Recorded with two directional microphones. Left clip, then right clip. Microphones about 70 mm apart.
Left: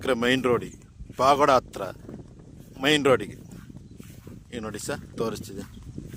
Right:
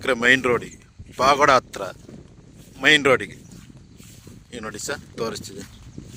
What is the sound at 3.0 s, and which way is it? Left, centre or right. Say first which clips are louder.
A man's voice: right 3 dB; centre.